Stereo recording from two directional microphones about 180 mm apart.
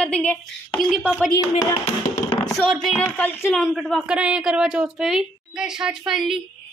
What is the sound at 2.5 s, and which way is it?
Speech, centre (ahead or behind).